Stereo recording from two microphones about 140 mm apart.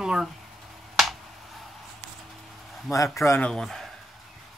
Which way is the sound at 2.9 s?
20° left (ahead or behind).